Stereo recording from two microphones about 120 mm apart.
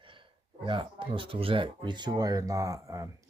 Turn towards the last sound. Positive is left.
turn(degrees=-25)  # may be behind; listen again after turning